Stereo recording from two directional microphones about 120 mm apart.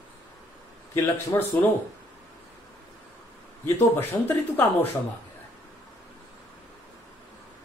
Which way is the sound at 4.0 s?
15° left (ahead or behind).